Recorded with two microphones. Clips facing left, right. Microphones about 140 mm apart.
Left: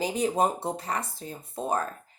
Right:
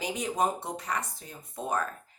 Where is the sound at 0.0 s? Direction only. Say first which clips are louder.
Left 4 dB; 30° left (ahead or behind).